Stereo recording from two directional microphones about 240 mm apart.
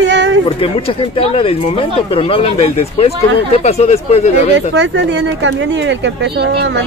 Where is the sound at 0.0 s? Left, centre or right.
Right.